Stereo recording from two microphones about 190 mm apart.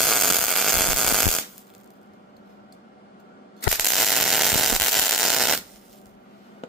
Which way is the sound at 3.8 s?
Centre (ahead or behind).